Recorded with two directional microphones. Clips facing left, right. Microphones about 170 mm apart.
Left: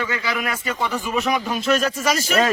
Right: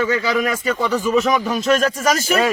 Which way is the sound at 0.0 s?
40° right (ahead or behind).